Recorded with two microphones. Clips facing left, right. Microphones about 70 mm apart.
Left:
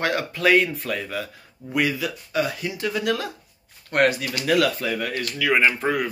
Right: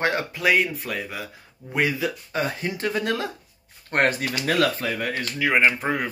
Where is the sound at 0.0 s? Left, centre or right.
Right.